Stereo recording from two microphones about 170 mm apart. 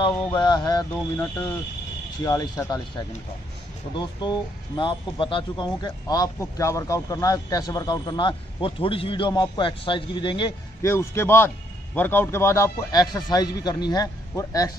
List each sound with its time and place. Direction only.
0.3 s speech: 25° left (ahead or behind)
2.2 s speech: 20° left (ahead or behind)
3.9 s speech: 25° left (ahead or behind)
10.8 s a man's voice: 15° left (ahead or behind)